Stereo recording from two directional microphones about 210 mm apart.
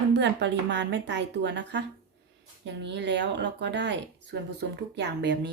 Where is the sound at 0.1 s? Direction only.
55° right (ahead or behind).